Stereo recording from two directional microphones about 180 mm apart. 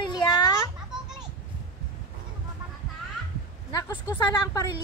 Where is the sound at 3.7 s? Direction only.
20° left (ahead or behind).